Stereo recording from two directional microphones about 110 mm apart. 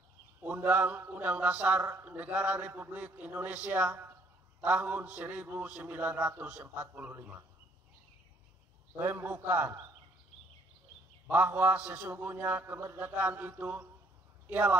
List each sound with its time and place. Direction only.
0.4 s a man's voice: 15° right (ahead or behind)
9.0 s a man's voice: 15° right (ahead or behind)
11.2 s a man's voice: 15° right (ahead or behind)